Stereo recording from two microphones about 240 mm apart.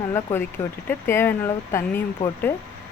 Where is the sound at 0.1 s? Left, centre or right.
Centre.